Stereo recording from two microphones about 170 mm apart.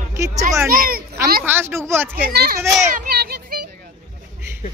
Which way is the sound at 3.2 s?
65° right (ahead or behind).